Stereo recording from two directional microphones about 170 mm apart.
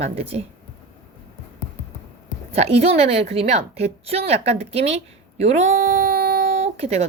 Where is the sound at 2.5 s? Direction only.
35° right (ahead or behind).